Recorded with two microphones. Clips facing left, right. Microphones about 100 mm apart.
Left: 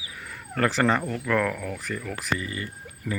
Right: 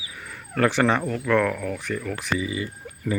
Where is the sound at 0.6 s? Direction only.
Centre (ahead or behind).